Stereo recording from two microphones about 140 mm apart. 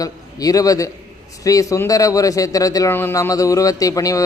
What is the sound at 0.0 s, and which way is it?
A man's voice, 25° left (ahead or behind).